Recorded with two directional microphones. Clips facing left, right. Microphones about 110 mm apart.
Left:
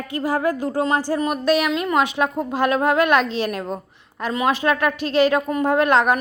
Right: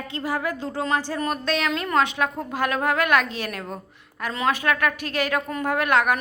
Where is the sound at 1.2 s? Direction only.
10° left (ahead or behind).